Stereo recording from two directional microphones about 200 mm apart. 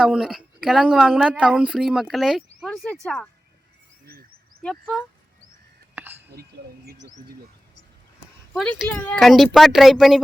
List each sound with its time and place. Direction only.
0.0 s speech: 5° right (ahead or behind)
4.0 s a sound: 50° right (ahead or behind)
4.6 s speech: centre (ahead or behind)
5.9 s whispering: 10° right (ahead or behind)
6.8 s speech: 60° right (ahead or behind)
8.5 s speech: centre (ahead or behind)